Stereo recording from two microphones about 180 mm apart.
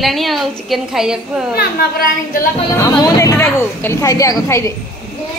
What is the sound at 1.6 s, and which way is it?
Speech, 55° left (ahead or behind).